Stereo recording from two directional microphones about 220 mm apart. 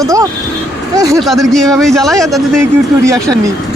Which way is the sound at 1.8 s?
Centre (ahead or behind).